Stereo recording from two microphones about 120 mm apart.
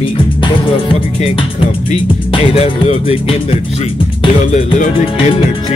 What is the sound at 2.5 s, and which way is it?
Speech, 55° left (ahead or behind).